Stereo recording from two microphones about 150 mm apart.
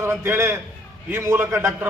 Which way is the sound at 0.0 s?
15° right (ahead or behind).